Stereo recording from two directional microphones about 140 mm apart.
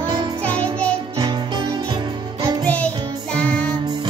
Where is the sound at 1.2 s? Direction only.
30° right (ahead or behind).